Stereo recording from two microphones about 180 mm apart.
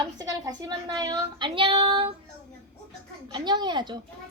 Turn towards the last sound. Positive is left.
turn(degrees=-25)  # may be behind; listen again after turning